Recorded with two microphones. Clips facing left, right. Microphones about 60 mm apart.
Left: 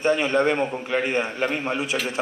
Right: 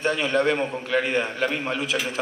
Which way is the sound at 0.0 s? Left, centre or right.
Left.